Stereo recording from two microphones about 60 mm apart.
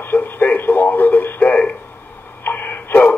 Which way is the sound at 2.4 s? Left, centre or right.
Left.